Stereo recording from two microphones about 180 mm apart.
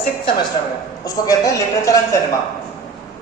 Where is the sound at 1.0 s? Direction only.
20° left (ahead or behind).